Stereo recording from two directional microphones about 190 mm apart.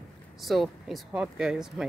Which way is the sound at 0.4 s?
Centre (ahead or behind).